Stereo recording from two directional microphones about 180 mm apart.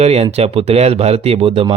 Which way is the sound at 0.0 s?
35° right (ahead or behind).